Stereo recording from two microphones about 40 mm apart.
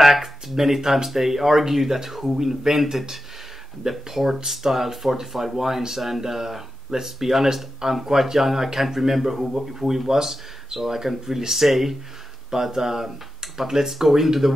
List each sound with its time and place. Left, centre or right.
0.0 s speech: centre